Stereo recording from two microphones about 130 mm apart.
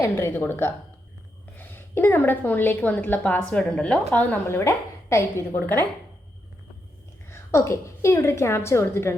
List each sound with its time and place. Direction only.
0.0 s a woman's voice: 20° left (ahead or behind)
7.3 s a woman's voice: 20° left (ahead or behind)